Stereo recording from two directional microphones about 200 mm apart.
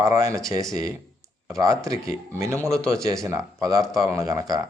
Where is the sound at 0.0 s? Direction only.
15° right (ahead or behind).